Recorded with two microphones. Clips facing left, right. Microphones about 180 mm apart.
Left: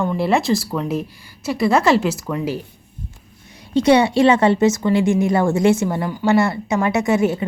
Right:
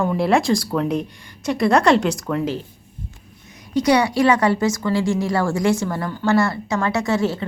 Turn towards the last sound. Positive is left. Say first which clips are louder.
# left 3 dB
turn(degrees=20)  # may be behind; listen again after turning